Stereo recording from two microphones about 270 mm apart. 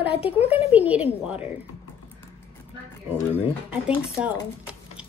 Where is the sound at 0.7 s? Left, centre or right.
Centre.